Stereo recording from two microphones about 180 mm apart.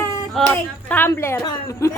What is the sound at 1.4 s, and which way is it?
Speech, 15° left (ahead or behind).